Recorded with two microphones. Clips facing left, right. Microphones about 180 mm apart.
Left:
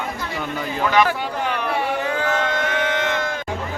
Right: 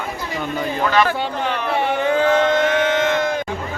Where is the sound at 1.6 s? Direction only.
25° right (ahead or behind).